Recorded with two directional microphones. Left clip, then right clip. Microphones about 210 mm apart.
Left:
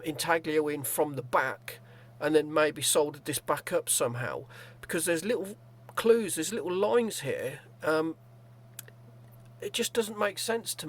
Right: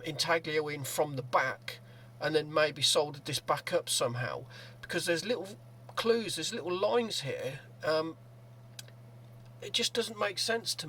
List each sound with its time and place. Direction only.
0.0 s speech: 45° left (ahead or behind)
9.6 s speech: 45° left (ahead or behind)